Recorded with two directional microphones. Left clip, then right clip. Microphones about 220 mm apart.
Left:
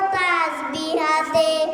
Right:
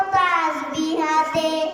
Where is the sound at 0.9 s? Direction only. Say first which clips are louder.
Left 1 dB; 25° left (ahead or behind).